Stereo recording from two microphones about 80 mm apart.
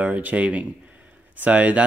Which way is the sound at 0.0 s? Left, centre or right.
Centre.